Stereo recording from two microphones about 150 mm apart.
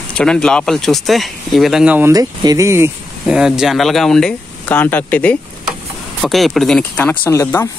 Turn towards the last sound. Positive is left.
turn(degrees=15)  # may be behind; listen again after turning